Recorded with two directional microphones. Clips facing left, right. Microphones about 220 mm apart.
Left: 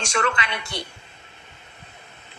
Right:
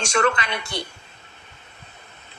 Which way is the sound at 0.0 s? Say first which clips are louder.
Right 4 dB; 40° right (ahead or behind).